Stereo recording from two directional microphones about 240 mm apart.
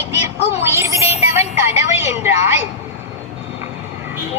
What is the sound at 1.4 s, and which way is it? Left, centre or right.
Music, left.